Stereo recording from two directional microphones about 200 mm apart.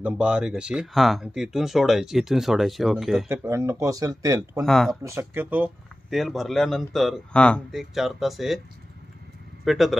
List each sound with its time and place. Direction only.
0.0 s speech: 5° right (ahead or behind)
3.3 s speech: 15° right (ahead or behind)
4.6 s speech: centre (ahead or behind)
5.0 s speech: 10° right (ahead or behind)
9.7 s speech: centre (ahead or behind)